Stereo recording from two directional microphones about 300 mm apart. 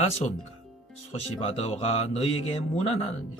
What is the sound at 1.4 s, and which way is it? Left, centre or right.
Speech, centre.